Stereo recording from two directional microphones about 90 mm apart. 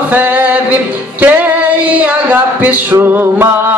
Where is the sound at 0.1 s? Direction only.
20° right (ahead or behind).